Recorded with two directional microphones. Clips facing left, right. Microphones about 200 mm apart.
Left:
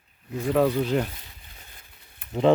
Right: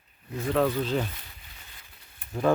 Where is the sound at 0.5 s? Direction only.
10° left (ahead or behind).